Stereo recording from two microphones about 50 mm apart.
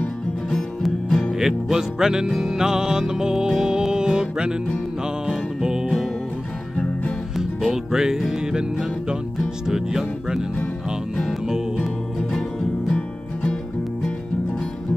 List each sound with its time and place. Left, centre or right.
1.4 s music: centre
7.3 s music: centre
9.7 s music: centre
11.4 s music: centre
11.8 s music: centre
12.9 s music: left